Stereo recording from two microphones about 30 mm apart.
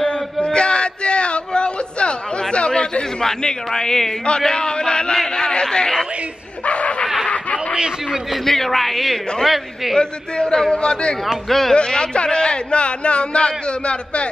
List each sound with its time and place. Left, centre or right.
0.4 s a sound: left
2.7 s a man's voice: left
6.6 s a sound: left
8.5 s a man's voice: centre
9.9 s speech: left
10.5 s a man's voice: left
10.8 s speech: left
11.4 s speech: centre
11.7 s speech: left